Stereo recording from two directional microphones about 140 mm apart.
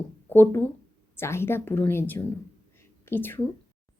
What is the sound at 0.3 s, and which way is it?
A woman's voice, 15° left (ahead or behind).